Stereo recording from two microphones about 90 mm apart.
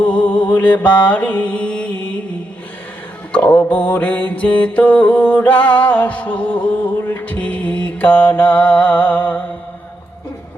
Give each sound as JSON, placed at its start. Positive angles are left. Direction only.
{"t": 0.3, "sound": "mantra", "side_deg": 65}
{"t": 0.5, "sound": "mantra", "side_deg": 20}
{"t": 3.3, "sound": "mantra", "side_deg": 15}